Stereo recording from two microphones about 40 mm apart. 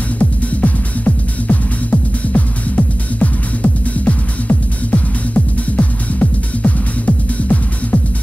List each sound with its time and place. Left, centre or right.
0.2 s music: left